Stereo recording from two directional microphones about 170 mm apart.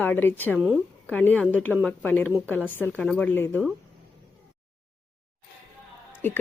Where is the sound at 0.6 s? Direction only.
5° right (ahead or behind).